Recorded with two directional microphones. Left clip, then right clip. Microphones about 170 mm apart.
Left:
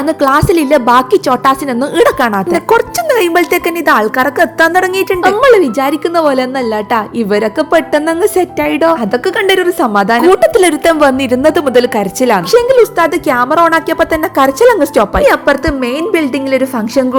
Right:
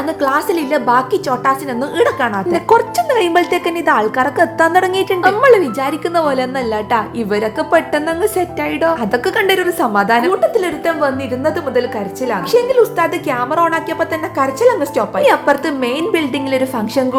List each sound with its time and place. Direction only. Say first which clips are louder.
0.2 s a woman's voice: left 6 dB; 40° left (ahead or behind)
2.5 s a woman's voice: left 2 dB; 20° left (ahead or behind)
5.2 s a woman's voice: left 3 dB; 35° left (ahead or behind)
10.2 s a woman's voice: left 7 dB; 65° left (ahead or behind)
12.5 s a woman's voice: left 2 dB; 45° left (ahead or behind)
15.2 s a woman's voice: right 1 dB; 25° left (ahead or behind)